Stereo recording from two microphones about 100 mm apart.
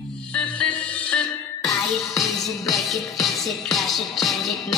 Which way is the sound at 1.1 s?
Centre (ahead or behind).